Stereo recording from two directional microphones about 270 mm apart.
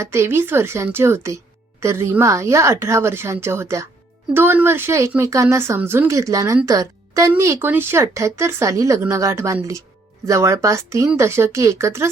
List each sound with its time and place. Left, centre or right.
0.0 s speech: centre